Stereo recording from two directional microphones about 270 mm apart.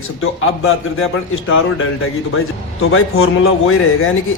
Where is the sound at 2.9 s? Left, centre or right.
Left.